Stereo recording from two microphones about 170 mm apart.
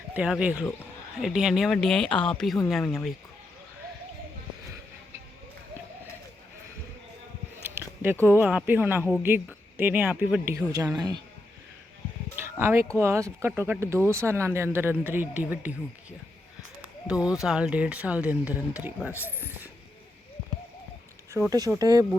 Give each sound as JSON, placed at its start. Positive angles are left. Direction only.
{"t": 0.1, "sound": "speech", "side_deg": -5}
{"t": 7.6, "sound": "speech", "side_deg": -15}
{"t": 12.5, "sound": "speech", "side_deg": -15}
{"t": 17.2, "sound": "speech", "side_deg": -5}
{"t": 21.4, "sound": "speech", "side_deg": -15}